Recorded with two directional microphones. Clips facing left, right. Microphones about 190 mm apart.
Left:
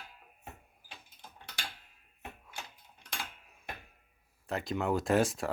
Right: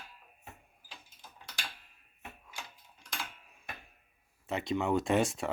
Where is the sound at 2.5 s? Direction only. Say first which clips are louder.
Left 1 dB; 60° left (ahead or behind).